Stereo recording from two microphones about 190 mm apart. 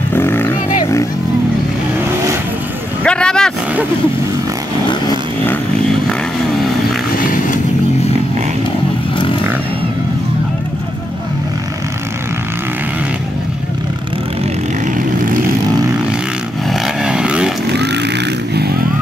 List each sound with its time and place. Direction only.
0.1 s roaring cats: 10° left (ahead or behind)
3.0 s vehicle: 5° left (ahead or behind)
7.2 s vehicle: 45° left (ahead or behind)
16.8 s vehicle: 5° right (ahead or behind)
17.6 s vehicle: 60° right (ahead or behind)